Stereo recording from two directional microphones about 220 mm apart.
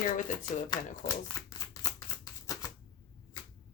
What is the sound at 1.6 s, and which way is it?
Shuffling cards, 15° left (ahead or behind).